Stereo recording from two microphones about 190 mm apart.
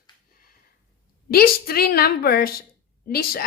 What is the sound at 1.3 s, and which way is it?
A woman's voice, 50° left (ahead or behind).